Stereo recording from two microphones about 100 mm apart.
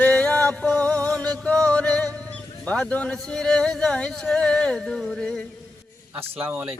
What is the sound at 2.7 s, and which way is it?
Speech, 10° left (ahead or behind).